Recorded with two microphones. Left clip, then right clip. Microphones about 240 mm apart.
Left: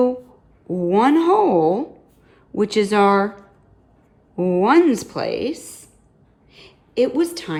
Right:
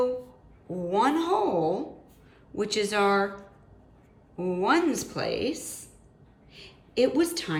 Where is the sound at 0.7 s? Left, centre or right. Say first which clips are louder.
Left 8 dB; left.